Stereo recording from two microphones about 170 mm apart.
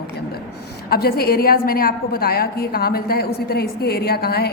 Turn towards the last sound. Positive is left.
turn(degrees=65)  # may be behind; listen again after turning